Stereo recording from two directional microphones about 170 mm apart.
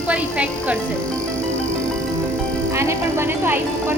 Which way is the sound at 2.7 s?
15° right (ahead or behind).